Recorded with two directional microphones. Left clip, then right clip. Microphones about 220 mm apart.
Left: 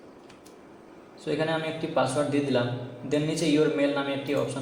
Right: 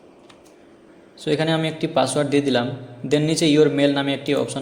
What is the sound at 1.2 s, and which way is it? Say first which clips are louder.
A man's voice: right 6 dB; 45° right (ahead or behind).